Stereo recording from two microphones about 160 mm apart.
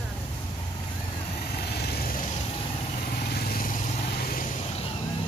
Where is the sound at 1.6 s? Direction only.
85° left.